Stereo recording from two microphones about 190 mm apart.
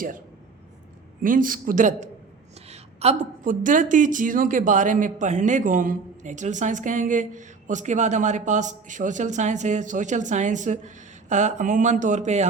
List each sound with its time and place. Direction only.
1.2 s a man's voice: 45° right (ahead or behind)